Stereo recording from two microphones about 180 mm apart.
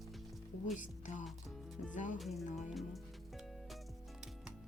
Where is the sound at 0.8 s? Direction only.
45° left (ahead or behind).